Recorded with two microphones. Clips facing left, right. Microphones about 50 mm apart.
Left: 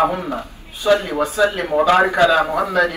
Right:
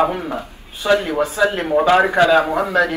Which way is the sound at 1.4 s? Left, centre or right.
Right.